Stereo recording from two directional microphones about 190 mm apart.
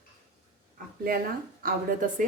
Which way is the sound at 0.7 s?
50° right (ahead or behind).